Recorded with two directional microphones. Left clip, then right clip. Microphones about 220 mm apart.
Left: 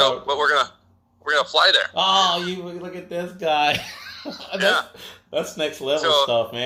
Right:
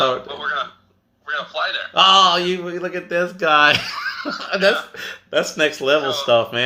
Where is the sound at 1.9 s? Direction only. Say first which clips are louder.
Right 6 dB; 25° right (ahead or behind).